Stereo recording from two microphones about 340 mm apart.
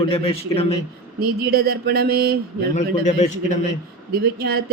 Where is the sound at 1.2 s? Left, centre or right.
Right.